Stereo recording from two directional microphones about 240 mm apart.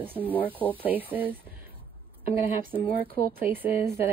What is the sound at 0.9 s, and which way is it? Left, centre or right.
Speech, centre.